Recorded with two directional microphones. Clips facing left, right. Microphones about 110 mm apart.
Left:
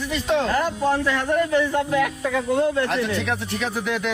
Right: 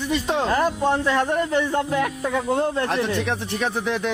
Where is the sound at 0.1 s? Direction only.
30° right (ahead or behind).